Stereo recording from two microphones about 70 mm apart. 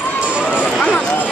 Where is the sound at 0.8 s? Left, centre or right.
Centre.